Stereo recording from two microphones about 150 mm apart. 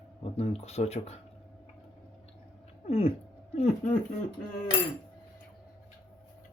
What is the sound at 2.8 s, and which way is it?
Cat, 40° left (ahead or behind).